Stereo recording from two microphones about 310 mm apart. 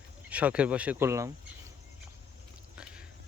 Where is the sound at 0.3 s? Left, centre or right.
Centre.